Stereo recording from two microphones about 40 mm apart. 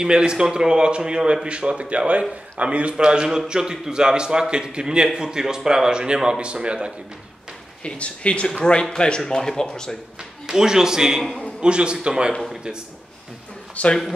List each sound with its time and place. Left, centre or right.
0.0 s a man's voice: right
7.8 s speech: left
10.4 s a man's voice: centre
11.6 s a man's voice: right
13.8 s a man's voice: left